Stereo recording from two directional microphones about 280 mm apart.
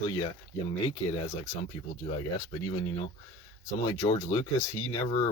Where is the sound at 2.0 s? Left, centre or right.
Centre.